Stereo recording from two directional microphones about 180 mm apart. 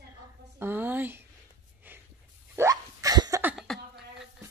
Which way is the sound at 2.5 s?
15° right (ahead or behind).